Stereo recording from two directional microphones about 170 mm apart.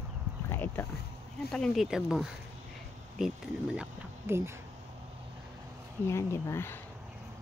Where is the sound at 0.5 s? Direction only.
15° left (ahead or behind).